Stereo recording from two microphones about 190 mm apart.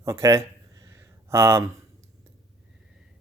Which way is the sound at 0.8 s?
15° right (ahead or behind).